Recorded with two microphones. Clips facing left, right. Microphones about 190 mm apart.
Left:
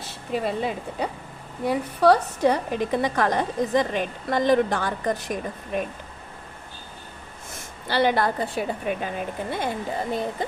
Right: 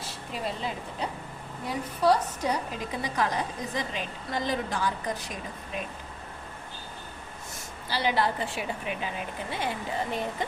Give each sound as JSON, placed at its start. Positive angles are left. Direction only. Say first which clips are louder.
{"t": 0.4, "sound": "a woman's voice", "louder": "left 3 dB", "side_deg": 60}
{"t": 7.9, "sound": "a woman's voice", "louder": "left 5 dB", "side_deg": 60}
{"t": 8.5, "sound": "speech", "louder": "left 6 dB", "side_deg": 40}